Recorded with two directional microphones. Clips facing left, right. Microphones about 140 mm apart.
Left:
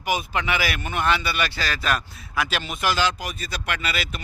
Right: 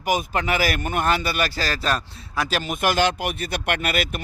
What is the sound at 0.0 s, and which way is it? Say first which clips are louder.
Speech: right 2 dB; 45° right (ahead or behind).